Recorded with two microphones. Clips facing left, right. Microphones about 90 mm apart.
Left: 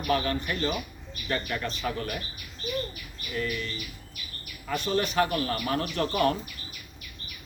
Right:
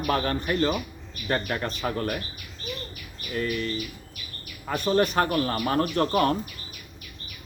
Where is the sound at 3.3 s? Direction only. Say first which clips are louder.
Right 3 dB; 40° right (ahead or behind).